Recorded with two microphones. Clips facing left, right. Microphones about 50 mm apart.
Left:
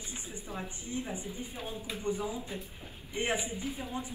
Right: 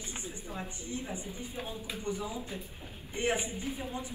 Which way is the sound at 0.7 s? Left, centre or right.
Left.